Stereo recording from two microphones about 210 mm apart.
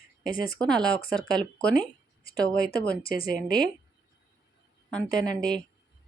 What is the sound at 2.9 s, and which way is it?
Speech, 45° left (ahead or behind).